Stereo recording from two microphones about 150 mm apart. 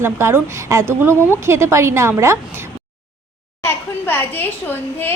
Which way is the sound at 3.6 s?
15° left (ahead or behind).